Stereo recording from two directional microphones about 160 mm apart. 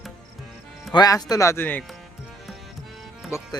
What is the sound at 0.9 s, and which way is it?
Speech, 20° left (ahead or behind).